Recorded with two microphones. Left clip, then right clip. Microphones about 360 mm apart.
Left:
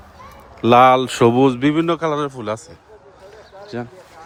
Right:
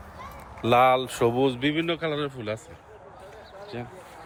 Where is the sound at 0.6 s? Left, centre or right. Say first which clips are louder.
Left 9 dB; left.